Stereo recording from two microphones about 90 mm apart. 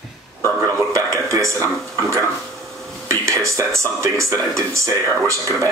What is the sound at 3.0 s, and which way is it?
Speech, 35° right (ahead or behind).